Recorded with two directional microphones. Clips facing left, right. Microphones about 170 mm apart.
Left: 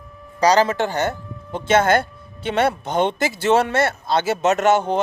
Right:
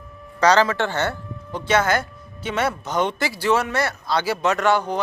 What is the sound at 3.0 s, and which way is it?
A man's voice, 25° left (ahead or behind).